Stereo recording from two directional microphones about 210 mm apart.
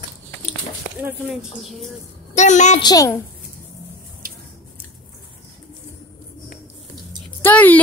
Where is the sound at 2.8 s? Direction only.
15° left (ahead or behind).